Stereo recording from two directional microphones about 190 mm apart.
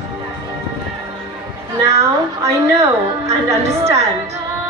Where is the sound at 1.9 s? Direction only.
15° right (ahead or behind).